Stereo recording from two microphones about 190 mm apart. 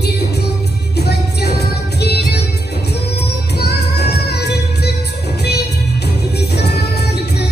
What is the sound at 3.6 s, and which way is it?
Music, 60° left (ahead or behind).